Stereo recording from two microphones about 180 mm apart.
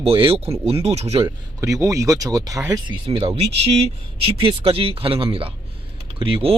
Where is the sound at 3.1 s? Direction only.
30° right (ahead or behind).